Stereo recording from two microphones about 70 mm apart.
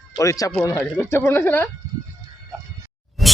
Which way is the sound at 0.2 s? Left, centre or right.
Left.